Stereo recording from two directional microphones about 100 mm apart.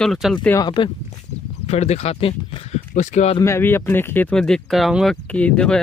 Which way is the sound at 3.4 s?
25° left (ahead or behind).